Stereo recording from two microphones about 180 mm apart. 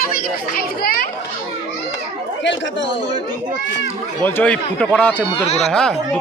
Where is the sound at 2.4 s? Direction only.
90° left.